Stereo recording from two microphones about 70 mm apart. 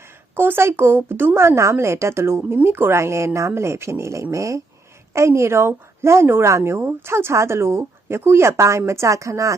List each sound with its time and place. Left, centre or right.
0.3 s speech: right